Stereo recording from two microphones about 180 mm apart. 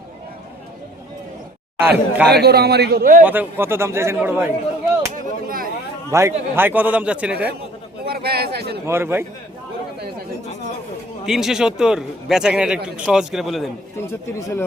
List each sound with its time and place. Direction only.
1.8 s a man's voice: 10° right (ahead or behind)
2.3 s a man's voice: 65° right (ahead or behind)
3.2 s a man's voice: 10° right (ahead or behind)
5.1 s speech: 55° right (ahead or behind)
6.1 s a man's voice: 15° right (ahead or behind)
8.0 s a man's voice: 60° right (ahead or behind)
8.9 s a man's voice: 15° right (ahead or behind)
11.3 s a man's voice: centre (ahead or behind)
14.1 s speech: 15° left (ahead or behind)